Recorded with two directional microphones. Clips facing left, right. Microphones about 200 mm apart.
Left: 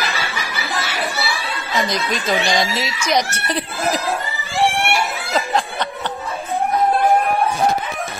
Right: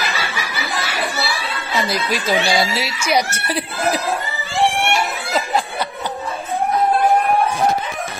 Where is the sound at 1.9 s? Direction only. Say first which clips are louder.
Right 1 dB; 5° right (ahead or behind).